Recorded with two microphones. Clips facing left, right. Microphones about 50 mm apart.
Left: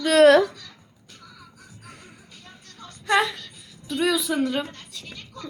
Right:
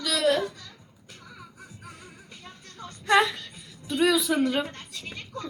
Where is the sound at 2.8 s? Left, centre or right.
Centre.